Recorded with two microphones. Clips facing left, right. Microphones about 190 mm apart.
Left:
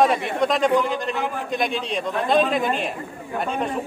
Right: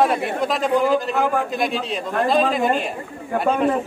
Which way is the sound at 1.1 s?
50° right (ahead or behind).